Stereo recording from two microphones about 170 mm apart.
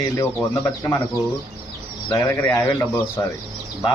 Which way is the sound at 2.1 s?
15° left (ahead or behind).